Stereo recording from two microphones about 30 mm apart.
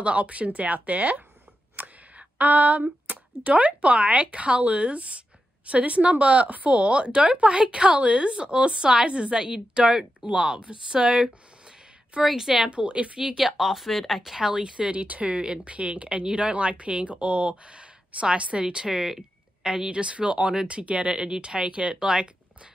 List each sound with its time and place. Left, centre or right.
0.0 s speech: right
12.4 s speech: centre
12.6 s speech: right
13.6 s speech: centre
14.4 s speech: right
18.9 s speech: centre
19.9 s speech: right